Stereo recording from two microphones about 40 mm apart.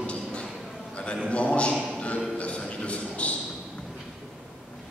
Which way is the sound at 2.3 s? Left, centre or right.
Left.